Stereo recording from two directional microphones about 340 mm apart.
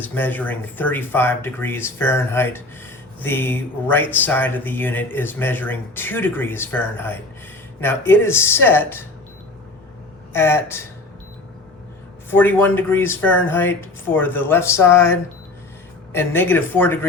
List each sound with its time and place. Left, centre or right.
0.1 s speech: centre
10.3 s speech: centre
12.3 s speech: centre